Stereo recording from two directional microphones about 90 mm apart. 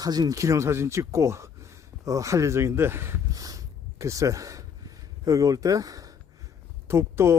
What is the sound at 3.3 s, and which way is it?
Snort, 45° right (ahead or behind).